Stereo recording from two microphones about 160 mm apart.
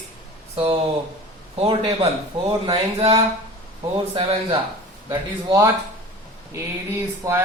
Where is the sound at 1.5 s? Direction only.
35° right (ahead or behind).